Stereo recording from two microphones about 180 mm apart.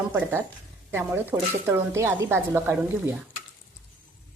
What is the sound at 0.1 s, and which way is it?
Speech, 10° right (ahead or behind).